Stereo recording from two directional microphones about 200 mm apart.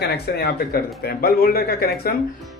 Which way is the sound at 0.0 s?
55° left (ahead or behind).